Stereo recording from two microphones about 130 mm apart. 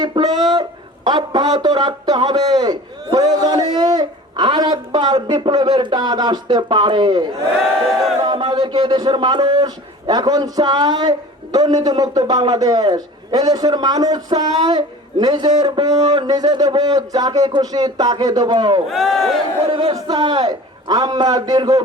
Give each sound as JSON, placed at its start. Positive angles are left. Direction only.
{"t": 0.0, "sound": "a man's voice", "side_deg": -30}
{"t": 18.9, "sound": "speech", "side_deg": 0}
{"t": 19.6, "sound": "a man's voice", "side_deg": -40}